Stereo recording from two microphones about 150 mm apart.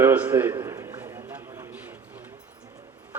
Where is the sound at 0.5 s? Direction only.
20° right (ahead or behind).